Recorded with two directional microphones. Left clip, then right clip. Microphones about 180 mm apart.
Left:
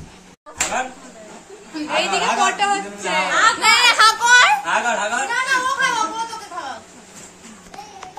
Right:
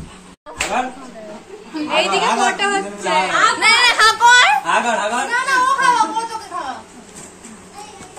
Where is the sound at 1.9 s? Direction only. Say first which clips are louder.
Right 3 dB; 55° left (ahead or behind).